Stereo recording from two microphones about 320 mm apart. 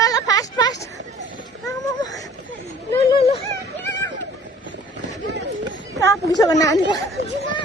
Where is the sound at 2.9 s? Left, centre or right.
Centre.